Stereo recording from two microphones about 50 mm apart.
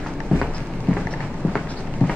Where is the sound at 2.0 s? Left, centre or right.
Left.